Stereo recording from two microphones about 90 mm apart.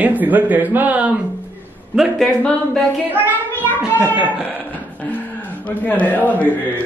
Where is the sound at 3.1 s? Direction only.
20° right (ahead or behind).